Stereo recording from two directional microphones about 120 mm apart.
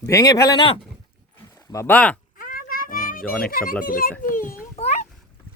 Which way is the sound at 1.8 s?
10° left (ahead or behind).